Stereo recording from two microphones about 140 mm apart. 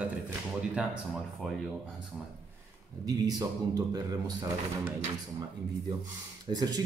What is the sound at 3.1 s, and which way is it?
A man's voice, 30° right (ahead or behind).